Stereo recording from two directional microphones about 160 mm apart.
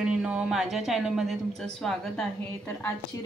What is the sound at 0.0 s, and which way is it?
A woman's voice, 5° right (ahead or behind).